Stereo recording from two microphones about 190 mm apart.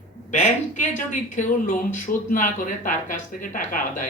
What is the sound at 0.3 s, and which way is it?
Speech, 40° left (ahead or behind).